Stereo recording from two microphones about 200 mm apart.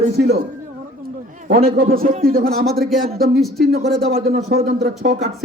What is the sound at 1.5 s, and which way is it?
A man's voice, 45° right (ahead or behind).